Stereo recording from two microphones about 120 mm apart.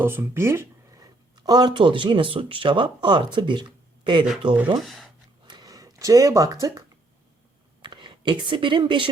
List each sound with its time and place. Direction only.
0.0 s speech: 20° right (ahead or behind)
1.5 s speech: 35° right (ahead or behind)
4.8 s speech: centre (ahead or behind)
5.5 s a sound: 30° right (ahead or behind)
7.8 s speech: 40° right (ahead or behind)